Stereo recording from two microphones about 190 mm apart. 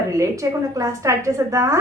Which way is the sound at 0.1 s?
15° right (ahead or behind).